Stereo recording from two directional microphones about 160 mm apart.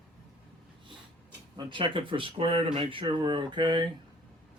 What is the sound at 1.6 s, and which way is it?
Speech, 30° right (ahead or behind).